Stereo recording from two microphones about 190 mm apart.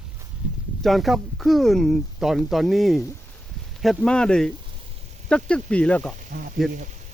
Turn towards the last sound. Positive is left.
turn(degrees=-40)  # may be behind; listen again after turning